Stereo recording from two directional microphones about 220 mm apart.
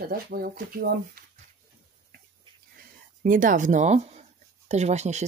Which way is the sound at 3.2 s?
35° right (ahead or behind).